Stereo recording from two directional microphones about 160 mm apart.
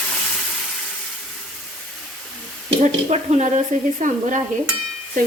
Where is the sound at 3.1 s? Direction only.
45° right (ahead or behind).